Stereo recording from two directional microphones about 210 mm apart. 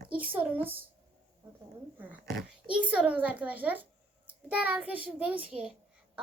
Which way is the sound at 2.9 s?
5° right (ahead or behind).